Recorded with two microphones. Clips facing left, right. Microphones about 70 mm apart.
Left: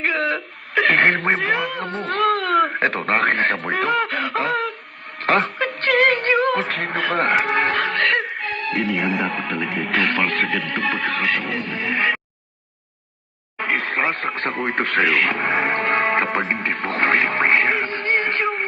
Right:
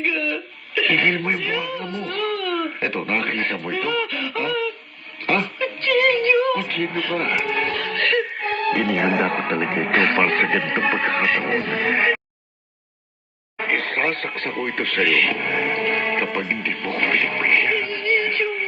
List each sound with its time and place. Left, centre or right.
0.0 s speech: left
5.2 s music: left
8.8 s music: right
9.5 s speech: right; by 11.4 s centre
13.6 s a sound: centre
14.4 s speech: left